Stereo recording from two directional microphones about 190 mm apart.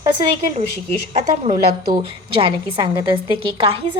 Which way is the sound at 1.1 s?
30° right (ahead or behind).